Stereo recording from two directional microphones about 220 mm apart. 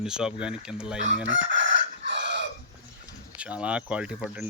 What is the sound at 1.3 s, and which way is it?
Chicken, 55° right (ahead or behind).